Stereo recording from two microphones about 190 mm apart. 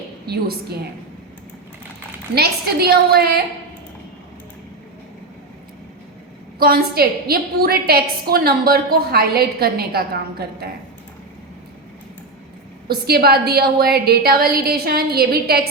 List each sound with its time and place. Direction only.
0.3 s a woman's voice: 55° right (ahead or behind)
2.3 s a woman's voice: 55° right (ahead or behind)
6.6 s a woman's voice: 55° right (ahead or behind)
12.9 s a woman's voice: 55° right (ahead or behind)